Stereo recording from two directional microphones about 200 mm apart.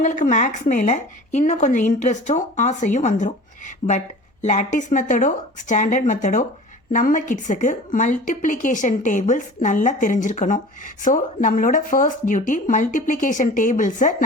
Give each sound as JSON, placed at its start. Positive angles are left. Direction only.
{"t": 0.0, "sound": "speech", "side_deg": 40}